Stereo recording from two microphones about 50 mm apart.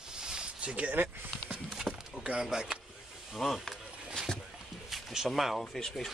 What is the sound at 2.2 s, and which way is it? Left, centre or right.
Speech, centre.